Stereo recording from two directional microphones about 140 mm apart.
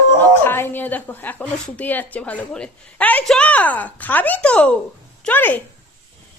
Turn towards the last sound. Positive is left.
turn(degrees=10)  # may be behind; listen again after turning